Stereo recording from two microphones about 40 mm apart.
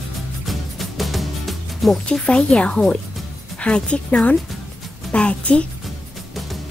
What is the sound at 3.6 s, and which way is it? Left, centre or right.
A woman's voice, left.